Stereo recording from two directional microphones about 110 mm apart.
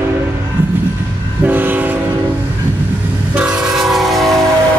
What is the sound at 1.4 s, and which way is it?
Train, 15° right (ahead or behind).